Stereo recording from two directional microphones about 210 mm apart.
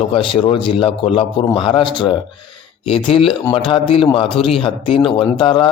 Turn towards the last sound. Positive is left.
turn(degrees=20)  # may be behind; listen again after turning